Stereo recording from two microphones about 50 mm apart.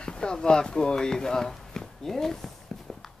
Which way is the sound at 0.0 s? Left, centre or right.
Centre.